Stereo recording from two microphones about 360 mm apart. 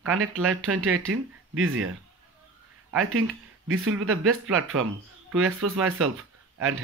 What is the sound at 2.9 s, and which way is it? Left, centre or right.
Speech, right.